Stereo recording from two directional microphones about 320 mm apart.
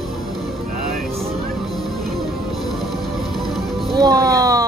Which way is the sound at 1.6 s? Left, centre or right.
Centre.